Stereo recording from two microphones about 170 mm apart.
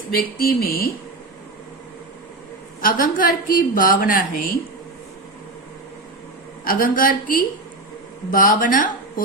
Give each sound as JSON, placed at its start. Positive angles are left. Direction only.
{"t": 0.2, "sound": "a woman's voice", "side_deg": 60}
{"t": 2.8, "sound": "a woman's voice", "side_deg": 55}
{"t": 6.7, "sound": "a woman's voice", "side_deg": 55}